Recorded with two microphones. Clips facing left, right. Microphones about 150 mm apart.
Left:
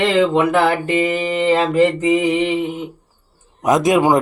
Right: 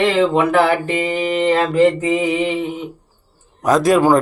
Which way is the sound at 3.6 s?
20° left (ahead or behind).